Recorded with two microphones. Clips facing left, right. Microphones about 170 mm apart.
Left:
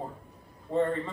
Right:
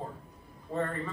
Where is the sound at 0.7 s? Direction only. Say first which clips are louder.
Left 5 dB; 20° left (ahead or behind).